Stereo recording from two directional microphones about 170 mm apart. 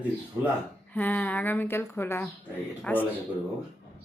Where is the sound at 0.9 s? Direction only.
10° left (ahead or behind).